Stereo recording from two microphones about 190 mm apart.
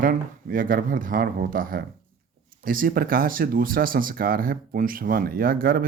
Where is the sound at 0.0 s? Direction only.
45° right (ahead or behind).